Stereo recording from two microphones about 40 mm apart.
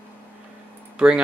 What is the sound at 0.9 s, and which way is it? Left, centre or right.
Speech, right.